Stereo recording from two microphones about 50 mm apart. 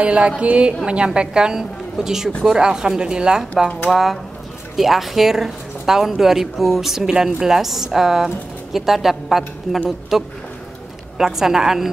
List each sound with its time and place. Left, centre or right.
0.0 s speech: right
3.9 s a woman's voice: centre